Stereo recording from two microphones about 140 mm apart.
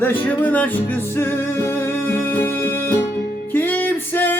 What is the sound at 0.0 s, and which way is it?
Music, 10° left (ahead or behind).